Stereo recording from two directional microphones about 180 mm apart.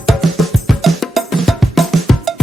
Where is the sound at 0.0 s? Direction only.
Centre (ahead or behind).